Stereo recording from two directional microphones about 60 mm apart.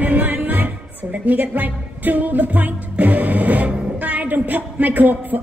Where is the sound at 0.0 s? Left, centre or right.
Right.